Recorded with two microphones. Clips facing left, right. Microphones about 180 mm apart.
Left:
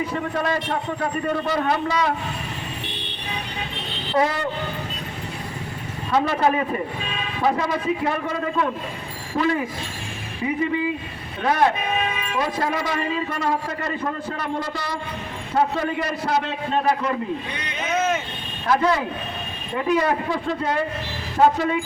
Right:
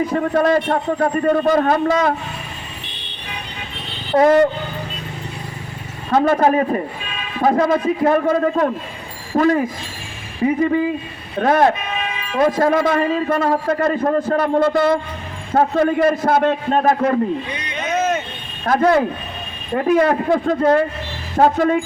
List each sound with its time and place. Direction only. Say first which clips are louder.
0.1 s a man's voice: right 8 dB; 45° right (ahead or behind)
4.1 s a man's voice: right 10 dB; 45° right (ahead or behind)
6.1 s a man's voice: right 5 dB; 50° right (ahead or behind)
18.6 s a man's voice: right 5 dB; 50° right (ahead or behind)